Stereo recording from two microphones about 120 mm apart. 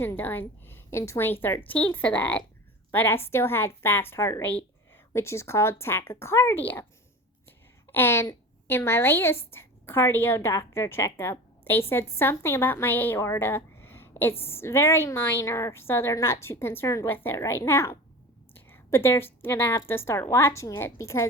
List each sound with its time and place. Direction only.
0.0 s a woman's voice: 15° left (ahead or behind)
7.9 s a woman's voice: 20° left (ahead or behind)